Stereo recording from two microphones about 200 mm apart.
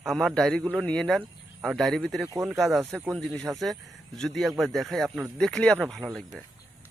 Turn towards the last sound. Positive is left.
turn(degrees=0)  # may be behind; listen again after turning